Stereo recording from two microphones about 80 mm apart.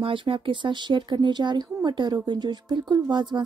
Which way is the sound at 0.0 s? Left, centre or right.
Right.